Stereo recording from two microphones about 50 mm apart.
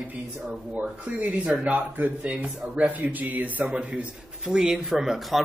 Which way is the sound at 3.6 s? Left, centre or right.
Centre.